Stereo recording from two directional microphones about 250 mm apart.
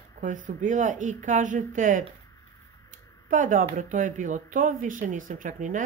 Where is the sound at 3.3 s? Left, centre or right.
Right.